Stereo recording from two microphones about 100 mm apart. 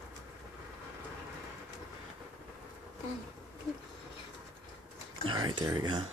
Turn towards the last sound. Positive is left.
turn(degrees=-45)  # may be behind; listen again after turning